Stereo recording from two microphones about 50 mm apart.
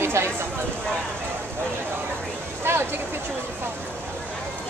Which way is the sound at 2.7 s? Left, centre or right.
Right.